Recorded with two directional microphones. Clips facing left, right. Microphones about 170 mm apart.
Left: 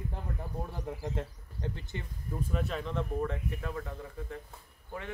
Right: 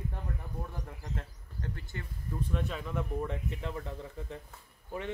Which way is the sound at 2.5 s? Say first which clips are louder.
Left 2 dB; centre (ahead or behind).